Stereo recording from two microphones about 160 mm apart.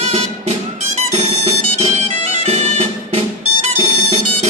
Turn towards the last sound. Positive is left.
turn(degrees=-40)  # may be behind; listen again after turning